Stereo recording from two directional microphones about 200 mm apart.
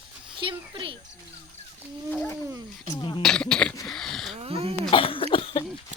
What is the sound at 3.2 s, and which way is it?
Cough, 5° left (ahead or behind).